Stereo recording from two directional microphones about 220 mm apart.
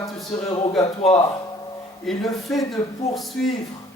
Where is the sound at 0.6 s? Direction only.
25° left (ahead or behind).